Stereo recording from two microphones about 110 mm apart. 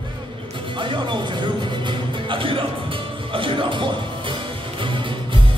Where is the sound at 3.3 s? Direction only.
50° right (ahead or behind).